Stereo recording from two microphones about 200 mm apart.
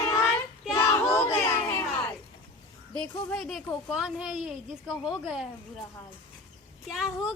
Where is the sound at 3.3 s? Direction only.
Centre (ahead or behind).